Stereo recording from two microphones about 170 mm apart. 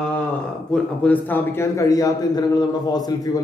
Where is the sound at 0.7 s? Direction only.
5° left (ahead or behind); by 3.3 s 25° left (ahead or behind).